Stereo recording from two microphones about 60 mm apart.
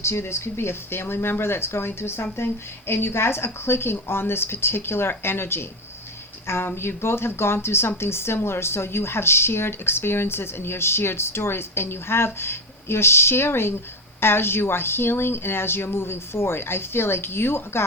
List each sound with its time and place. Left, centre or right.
0.0 s speech: left